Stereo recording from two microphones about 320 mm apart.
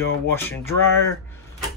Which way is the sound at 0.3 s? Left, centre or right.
Centre.